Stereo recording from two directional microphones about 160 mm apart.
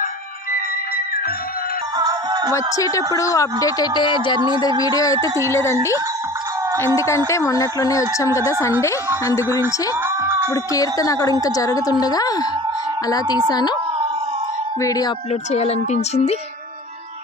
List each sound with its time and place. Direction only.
2.0 s music: 25° right (ahead or behind)
2.5 s a woman's voice: 20° left (ahead or behind)
7.0 s a woman's voice: 20° left (ahead or behind)
10.2 s a sound: 15° right (ahead or behind)
10.5 s a woman's voice: 20° left (ahead or behind)
13.5 s a woman's voice: 25° left (ahead or behind)
14.8 s a woman's voice: 20° left (ahead or behind)
15.5 s speech: 40° left (ahead or behind)